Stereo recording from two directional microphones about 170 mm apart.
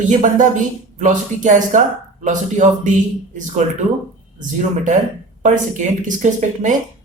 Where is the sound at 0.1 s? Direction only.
50° right (ahead or behind).